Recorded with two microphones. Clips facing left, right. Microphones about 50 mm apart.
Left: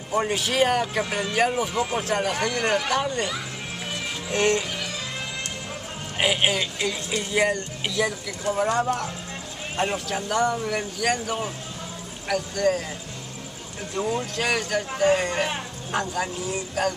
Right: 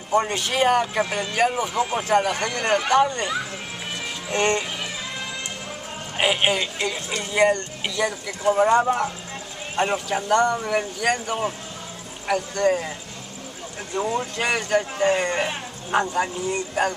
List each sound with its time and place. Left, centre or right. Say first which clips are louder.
0.1 s speech: right 2 dB; centre
4.3 s speech: even; centre
6.1 s speech: right 2 dB; centre
8.3 s speech: right 6 dB; centre
12.5 s speech: right 2 dB; centre
13.9 s speech: right 2 dB; centre